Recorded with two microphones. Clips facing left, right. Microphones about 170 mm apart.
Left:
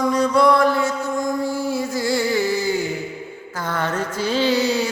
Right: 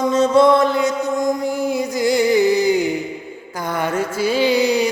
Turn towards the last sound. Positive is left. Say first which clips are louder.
# right 3 dB
turn(degrees=-15)  # may be behind; listen again after turning